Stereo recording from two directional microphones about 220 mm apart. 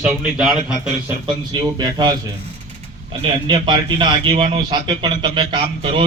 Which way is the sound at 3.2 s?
25° right (ahead or behind).